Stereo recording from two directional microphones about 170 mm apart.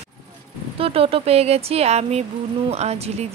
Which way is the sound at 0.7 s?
35° right (ahead or behind).